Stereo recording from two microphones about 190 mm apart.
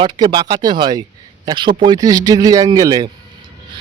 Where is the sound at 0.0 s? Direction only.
25° right (ahead or behind).